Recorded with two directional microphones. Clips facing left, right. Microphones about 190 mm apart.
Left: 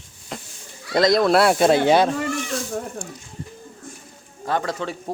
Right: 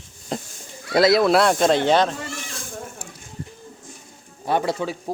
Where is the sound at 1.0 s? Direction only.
5° right (ahead or behind); by 2.1 s 10° left (ahead or behind).